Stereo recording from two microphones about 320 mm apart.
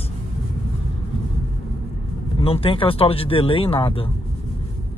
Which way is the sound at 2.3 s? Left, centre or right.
Centre.